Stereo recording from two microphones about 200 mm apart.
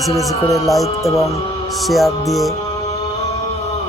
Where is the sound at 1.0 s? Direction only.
15° left (ahead or behind).